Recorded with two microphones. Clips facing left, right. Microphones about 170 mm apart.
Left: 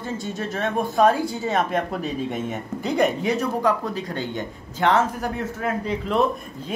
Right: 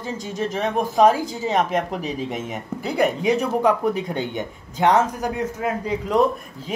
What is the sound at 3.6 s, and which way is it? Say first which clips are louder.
Speech: right 3 dB; 20° right (ahead or behind).